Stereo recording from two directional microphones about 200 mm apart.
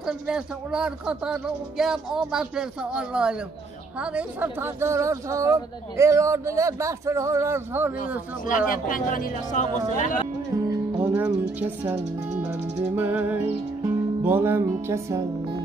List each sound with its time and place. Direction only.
0.0 s speech: 5° right (ahead or behind)
8.5 s speech: 45° left (ahead or behind)
11.0 s speech: 10° right (ahead or behind)
12.4 s music: 10° right (ahead or behind)